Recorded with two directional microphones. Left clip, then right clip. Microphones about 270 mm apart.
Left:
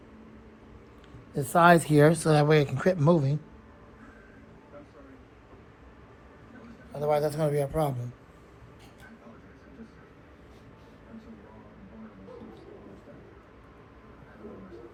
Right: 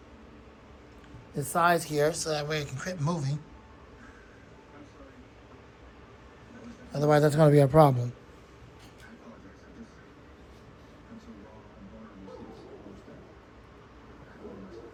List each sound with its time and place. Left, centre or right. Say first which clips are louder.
1.3 s speech: left 3 dB; centre
1.5 s speech: left 5 dB; left; by 3.3 s centre
6.9 s a man's voice: right 3 dB; right